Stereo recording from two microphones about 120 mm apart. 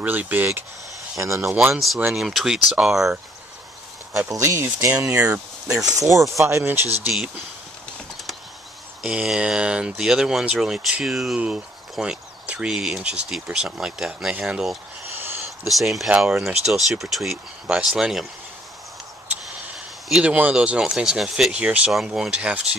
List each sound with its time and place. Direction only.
0.0 s speech: 15° right (ahead or behind)
1.7 s speech: centre (ahead or behind)
4.3 s speech: 25° right (ahead or behind)
4.6 s speech: 15° right (ahead or behind)
5.9 s speech: 25° right (ahead or behind)
9.0 s speech: 5° right (ahead or behind)
15.1 s a sound: 20° right (ahead or behind)
15.6 s speech: centre (ahead or behind)
20.1 s speech: 10° right (ahead or behind)